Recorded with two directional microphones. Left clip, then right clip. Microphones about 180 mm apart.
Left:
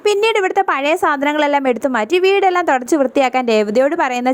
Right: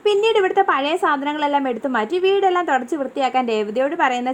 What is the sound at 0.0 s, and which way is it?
A woman's voice, 35° left (ahead or behind).